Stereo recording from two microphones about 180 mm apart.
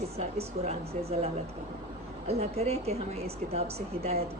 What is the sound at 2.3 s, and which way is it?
A woman's voice, 35° right (ahead or behind).